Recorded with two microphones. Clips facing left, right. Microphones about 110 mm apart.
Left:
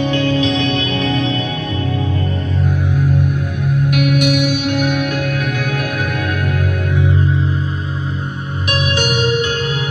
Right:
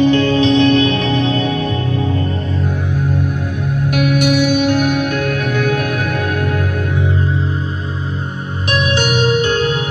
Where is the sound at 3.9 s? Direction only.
35° right (ahead or behind).